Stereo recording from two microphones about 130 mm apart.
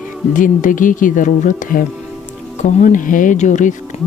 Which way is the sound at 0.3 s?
90° left.